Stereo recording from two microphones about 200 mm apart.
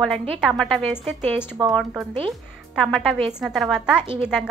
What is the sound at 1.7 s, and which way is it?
A woman's voice, centre (ahead or behind).